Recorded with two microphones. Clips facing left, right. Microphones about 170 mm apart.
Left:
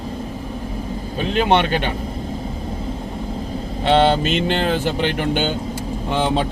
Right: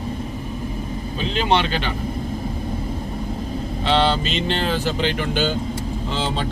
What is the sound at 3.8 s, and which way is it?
Speech, 50° left (ahead or behind).